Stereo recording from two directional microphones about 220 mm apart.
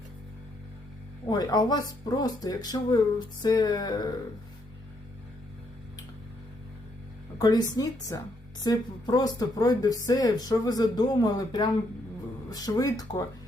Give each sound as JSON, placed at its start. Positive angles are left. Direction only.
{"t": 1.3, "sound": "a woman's voice", "side_deg": 20}
{"t": 7.3, "sound": "a woman's voice", "side_deg": 15}